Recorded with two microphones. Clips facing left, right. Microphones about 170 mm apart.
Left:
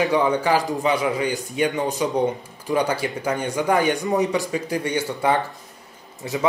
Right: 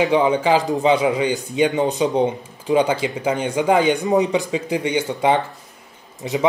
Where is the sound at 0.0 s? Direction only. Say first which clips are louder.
Right 3 dB; 20° right (ahead or behind).